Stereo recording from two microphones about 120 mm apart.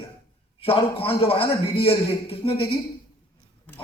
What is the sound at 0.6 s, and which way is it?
A man's voice, 55° left (ahead or behind).